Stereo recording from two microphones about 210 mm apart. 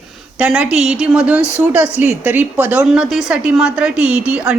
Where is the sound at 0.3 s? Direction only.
5° right (ahead or behind).